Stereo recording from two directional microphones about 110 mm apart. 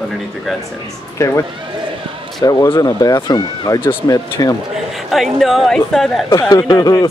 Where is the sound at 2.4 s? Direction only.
35° left (ahead or behind).